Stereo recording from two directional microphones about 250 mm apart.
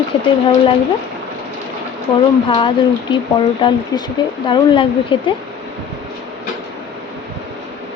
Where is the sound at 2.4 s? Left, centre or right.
Left.